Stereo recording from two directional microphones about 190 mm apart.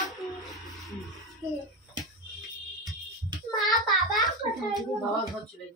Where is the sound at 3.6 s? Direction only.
Centre (ahead or behind).